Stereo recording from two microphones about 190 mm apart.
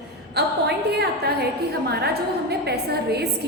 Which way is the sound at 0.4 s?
60° right (ahead or behind).